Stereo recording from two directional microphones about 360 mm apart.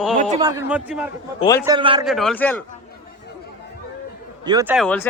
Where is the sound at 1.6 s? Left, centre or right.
Centre.